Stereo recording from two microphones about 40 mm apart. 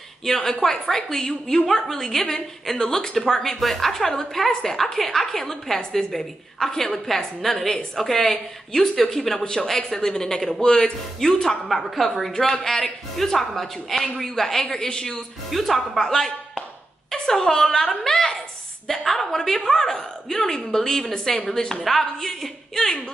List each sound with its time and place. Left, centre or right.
0.2 s a woman's voice: centre
9.4 s a woman's voice: left
9.7 s a woman's voice: centre
11.4 s a woman's voice: centre
14.6 s a woman's voice: centre
15.5 s a woman's voice: centre